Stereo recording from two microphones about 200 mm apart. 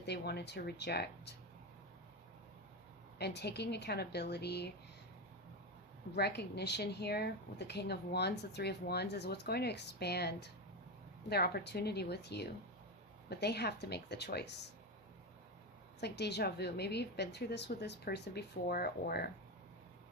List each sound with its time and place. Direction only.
0.0 s a woman's voice: 55° left (ahead or behind)
3.2 s a woman's voice: 55° left (ahead or behind)
6.1 s a woman's voice: 55° left (ahead or behind)
16.0 s a woman's voice: 55° left (ahead or behind)